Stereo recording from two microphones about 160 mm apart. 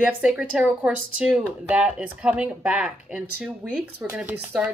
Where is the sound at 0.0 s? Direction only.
5° right (ahead or behind).